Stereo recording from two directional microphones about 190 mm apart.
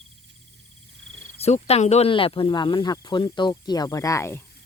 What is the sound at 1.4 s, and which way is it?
Speech, 35° left (ahead or behind).